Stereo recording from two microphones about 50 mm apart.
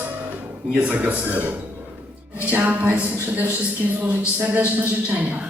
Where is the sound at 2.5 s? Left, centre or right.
Right.